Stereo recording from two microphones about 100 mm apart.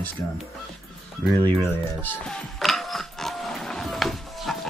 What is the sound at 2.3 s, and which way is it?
Printer, centre (ahead or behind).